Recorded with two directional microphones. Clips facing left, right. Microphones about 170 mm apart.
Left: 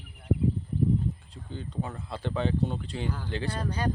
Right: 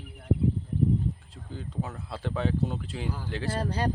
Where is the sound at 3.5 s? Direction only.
35° right (ahead or behind).